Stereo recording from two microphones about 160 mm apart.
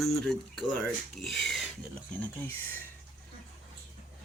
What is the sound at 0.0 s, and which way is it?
Speech, centre (ahead or behind).